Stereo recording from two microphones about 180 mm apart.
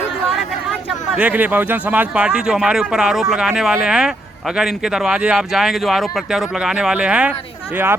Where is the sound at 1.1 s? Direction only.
10° right (ahead or behind).